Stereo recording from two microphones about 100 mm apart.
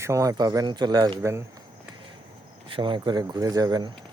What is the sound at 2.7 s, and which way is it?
Speech, 55° right (ahead or behind).